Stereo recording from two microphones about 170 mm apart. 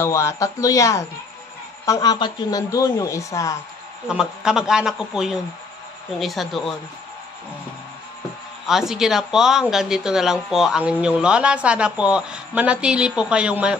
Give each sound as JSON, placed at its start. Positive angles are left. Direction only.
{"t": 0.0, "sound": "speech", "side_deg": 15}
{"t": 4.1, "sound": "speech", "side_deg": -5}
{"t": 8.6, "sound": "speech", "side_deg": 0}